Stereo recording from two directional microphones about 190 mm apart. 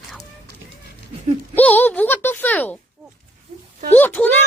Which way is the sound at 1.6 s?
10° left (ahead or behind).